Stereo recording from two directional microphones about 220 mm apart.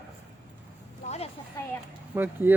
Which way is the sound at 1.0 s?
30° left (ahead or behind).